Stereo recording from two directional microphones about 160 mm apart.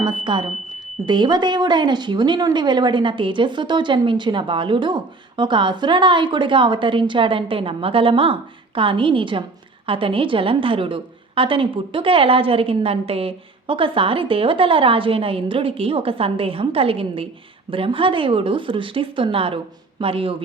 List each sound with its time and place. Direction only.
0.0 s speech: 30° right (ahead or behind)